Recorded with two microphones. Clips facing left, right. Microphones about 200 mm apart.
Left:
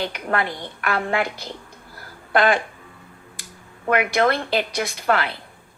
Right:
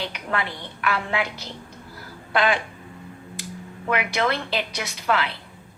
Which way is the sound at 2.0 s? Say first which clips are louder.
Left 3 dB; 50° left (ahead or behind).